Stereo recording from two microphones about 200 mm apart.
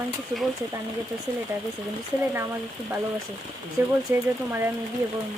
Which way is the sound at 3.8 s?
10° right (ahead or behind).